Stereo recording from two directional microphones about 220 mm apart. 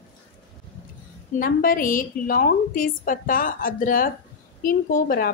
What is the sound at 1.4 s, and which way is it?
A woman's voice, 40° left (ahead or behind).